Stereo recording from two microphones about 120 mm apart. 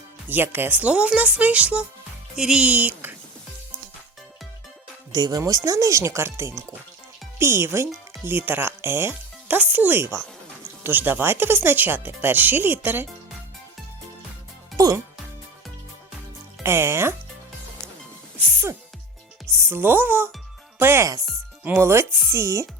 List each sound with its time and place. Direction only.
0.3 s speech: 15° right (ahead or behind)
5.1 s speech: 35° right (ahead or behind); by 13.1 s 15° right (ahead or behind)
14.8 s music: 30° right (ahead or behind)
16.6 s speech: 20° right (ahead or behind)
18.3 s music: 20° right (ahead or behind)
19.5 s speech: 20° right (ahead or behind)